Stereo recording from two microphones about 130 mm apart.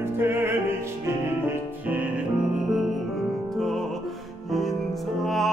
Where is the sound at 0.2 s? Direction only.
20° right (ahead or behind).